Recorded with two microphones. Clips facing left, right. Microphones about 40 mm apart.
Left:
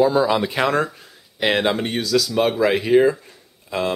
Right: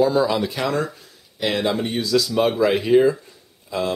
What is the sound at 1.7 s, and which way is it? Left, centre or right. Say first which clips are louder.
Speech: even; left.